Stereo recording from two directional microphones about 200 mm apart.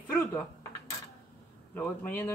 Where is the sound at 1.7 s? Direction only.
10° left (ahead or behind).